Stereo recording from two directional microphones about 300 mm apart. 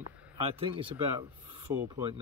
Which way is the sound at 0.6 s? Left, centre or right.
Centre.